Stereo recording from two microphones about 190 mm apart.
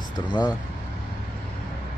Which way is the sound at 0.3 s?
20° left (ahead or behind).